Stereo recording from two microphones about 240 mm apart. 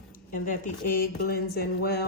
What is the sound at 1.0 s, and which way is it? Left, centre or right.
Speech, left.